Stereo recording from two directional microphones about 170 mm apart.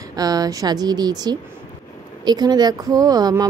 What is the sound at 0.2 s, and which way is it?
Speech, 20° right (ahead or behind).